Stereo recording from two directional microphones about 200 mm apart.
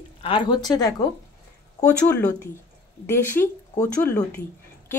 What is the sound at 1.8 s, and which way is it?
Speech, 5° left (ahead or behind).